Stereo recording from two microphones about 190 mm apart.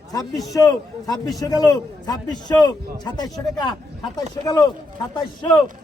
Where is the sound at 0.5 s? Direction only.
20° left (ahead or behind).